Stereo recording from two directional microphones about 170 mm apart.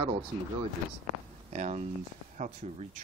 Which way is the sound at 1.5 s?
45° right (ahead or behind).